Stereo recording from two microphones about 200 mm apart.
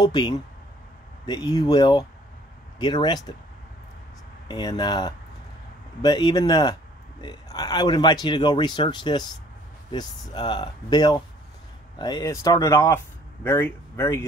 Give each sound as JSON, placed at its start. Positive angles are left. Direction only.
{"t": 0.0, "sound": "speech", "side_deg": 20}
{"t": 4.5, "sound": "speech", "side_deg": 20}